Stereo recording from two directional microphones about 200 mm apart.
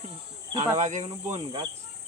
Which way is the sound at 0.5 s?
35° right (ahead or behind).